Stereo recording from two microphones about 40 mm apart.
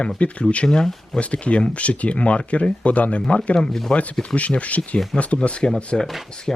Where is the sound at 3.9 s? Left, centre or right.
Left.